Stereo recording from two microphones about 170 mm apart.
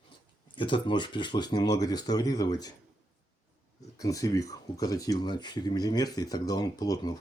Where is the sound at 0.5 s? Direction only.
30° left (ahead or behind).